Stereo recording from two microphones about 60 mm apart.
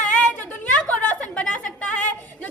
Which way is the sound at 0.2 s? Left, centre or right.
Left.